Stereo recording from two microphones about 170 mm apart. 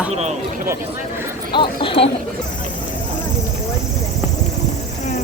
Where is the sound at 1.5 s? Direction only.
30° left (ahead or behind).